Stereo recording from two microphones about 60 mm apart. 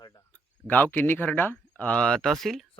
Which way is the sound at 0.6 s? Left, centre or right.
Left.